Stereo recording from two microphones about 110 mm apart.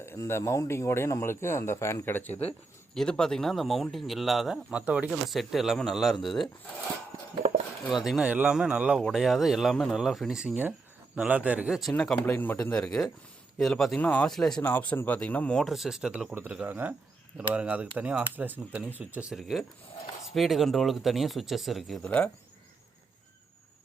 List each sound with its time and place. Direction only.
0.0 s speech: 20° left (ahead or behind)
2.3 s speech: 70° left (ahead or behind)
2.9 s speech: 5° left (ahead or behind); by 5.1 s 10° right (ahead or behind)
5.3 s speech: centre (ahead or behind)
7.9 s speech: centre (ahead or behind)
11.8 s speech: 5° left (ahead or behind)
14.0 s speech: 15° left (ahead or behind)
14.3 s speech: 5° left (ahead or behind)
14.6 s speech: 15° left (ahead or behind); by 19.3 s 15° right (ahead or behind)
19.3 s speech: centre (ahead or behind)
22.0 s speech: 10° left (ahead or behind)